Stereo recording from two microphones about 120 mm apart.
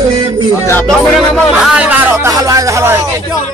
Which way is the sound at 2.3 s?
30° right (ahead or behind).